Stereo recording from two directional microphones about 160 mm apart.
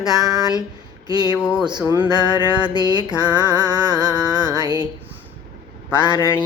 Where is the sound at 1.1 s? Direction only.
25° right (ahead or behind).